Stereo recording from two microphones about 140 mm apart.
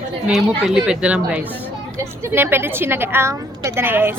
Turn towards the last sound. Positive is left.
turn(degrees=-15)  # may be behind; listen again after turning